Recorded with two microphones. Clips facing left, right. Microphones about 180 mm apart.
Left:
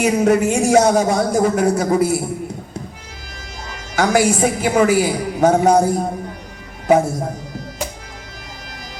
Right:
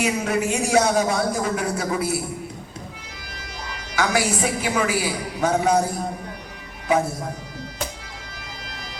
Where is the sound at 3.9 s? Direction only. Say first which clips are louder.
Left 7 dB; 45° left (ahead or behind).